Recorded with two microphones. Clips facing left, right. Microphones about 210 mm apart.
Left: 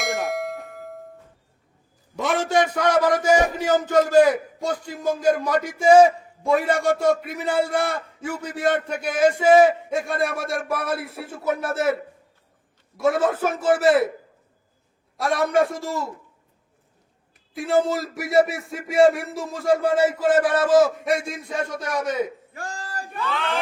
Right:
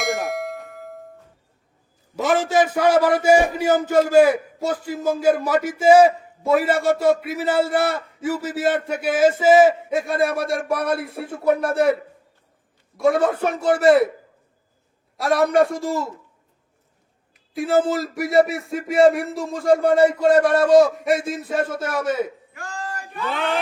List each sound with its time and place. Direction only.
0.0 s bell: centre (ahead or behind)
2.1 s a man's voice: centre (ahead or behind)
13.0 s speech: centre (ahead or behind)
15.2 s speech: centre (ahead or behind)
17.5 s speech: centre (ahead or behind)
22.5 s a sound: 35° left (ahead or behind)